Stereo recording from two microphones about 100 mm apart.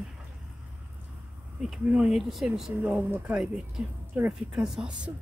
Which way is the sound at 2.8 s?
20° right (ahead or behind).